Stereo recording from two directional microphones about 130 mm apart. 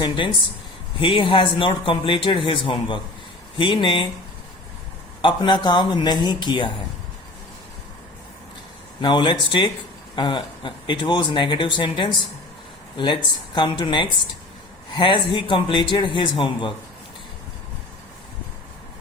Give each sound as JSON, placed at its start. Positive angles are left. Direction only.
{"t": 0.0, "sound": "speech", "side_deg": 40}
{"t": 5.2, "sound": "speech", "side_deg": 35}
{"t": 9.0, "sound": "speech", "side_deg": 35}